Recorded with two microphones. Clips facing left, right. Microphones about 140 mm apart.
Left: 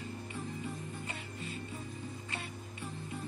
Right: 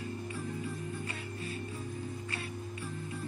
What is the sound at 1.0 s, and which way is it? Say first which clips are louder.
Music: right 3 dB; 25° left (ahead or behind).